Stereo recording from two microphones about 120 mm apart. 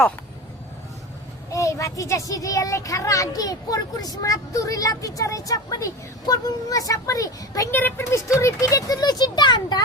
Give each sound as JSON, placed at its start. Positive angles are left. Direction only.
{"t": 1.5, "sound": "a child's voice", "side_deg": 25}
{"t": 7.7, "sound": "a child's voice", "side_deg": 15}